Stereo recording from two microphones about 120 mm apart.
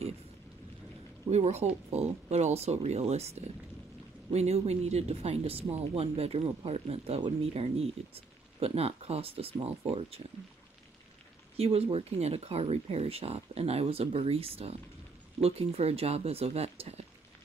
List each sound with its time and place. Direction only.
1.3 s speech: 65° right (ahead or behind)
11.5 s speech: 55° right (ahead or behind)